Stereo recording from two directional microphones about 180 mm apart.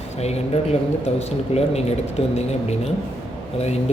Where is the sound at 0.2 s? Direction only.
35° left (ahead or behind).